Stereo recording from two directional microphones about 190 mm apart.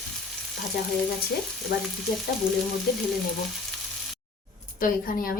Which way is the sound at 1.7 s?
55° left (ahead or behind).